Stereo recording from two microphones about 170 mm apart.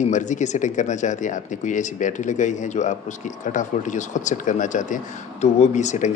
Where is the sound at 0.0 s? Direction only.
45° left (ahead or behind).